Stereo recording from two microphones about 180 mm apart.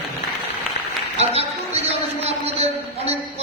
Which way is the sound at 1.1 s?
35° right (ahead or behind).